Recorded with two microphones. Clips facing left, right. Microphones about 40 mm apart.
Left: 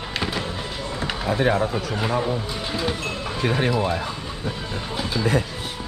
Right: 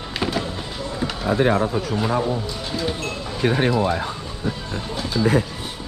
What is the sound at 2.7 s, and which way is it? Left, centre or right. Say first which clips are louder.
Music: even; centre.